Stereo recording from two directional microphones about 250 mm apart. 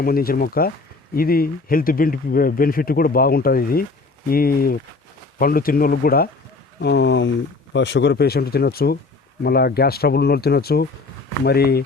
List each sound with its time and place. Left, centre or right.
0.0 s speech: left